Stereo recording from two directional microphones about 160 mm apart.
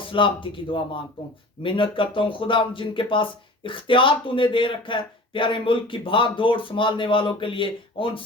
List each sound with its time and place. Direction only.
0.1 s speech: 30° left (ahead or behind)